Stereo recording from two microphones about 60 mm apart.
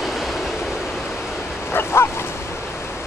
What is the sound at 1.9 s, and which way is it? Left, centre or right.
Bow-wow, left.